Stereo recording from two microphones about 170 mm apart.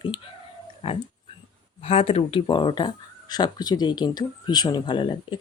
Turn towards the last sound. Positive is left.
turn(degrees=25)  # may be behind; listen again after turning